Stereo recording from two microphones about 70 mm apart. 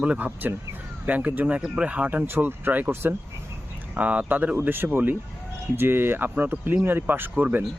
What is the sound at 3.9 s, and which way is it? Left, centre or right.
Speech, centre.